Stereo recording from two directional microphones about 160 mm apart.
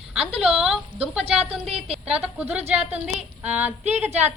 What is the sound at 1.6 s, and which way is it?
Speech, 40° right (ahead or behind).